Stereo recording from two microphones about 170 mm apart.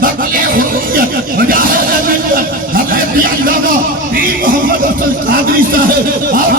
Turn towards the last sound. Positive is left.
turn(degrees=-55)  # may be behind; listen again after turning